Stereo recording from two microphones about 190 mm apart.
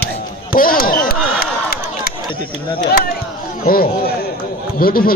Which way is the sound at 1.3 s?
55° left (ahead or behind).